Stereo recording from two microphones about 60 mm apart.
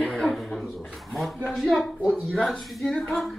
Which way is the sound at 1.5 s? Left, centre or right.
Centre.